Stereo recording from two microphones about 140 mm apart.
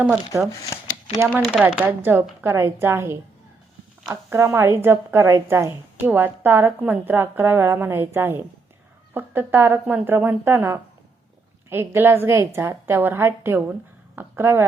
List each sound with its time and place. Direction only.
1.3 s speech: 5° right (ahead or behind)
1.7 s a woman's voice: 15° right (ahead or behind)